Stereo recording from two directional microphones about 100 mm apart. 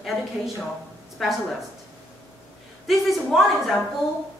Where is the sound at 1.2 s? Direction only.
Centre (ahead or behind).